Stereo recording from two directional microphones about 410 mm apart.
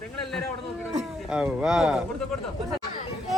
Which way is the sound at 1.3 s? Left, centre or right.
Centre.